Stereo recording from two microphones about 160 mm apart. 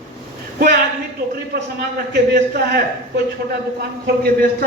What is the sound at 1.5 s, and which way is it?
Speech, 70° right (ahead or behind).